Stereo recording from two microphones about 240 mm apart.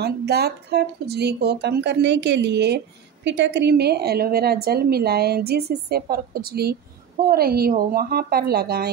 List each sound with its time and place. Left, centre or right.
0.0 s a woman's voice: right